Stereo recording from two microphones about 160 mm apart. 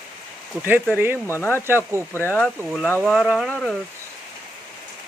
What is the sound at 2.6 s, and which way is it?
Speech, 5° right (ahead or behind).